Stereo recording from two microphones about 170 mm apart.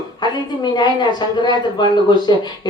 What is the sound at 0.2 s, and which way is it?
A woman's voice, 25° left (ahead or behind).